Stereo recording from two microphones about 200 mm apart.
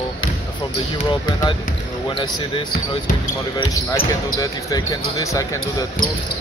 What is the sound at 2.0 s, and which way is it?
Speech, 25° left (ahead or behind).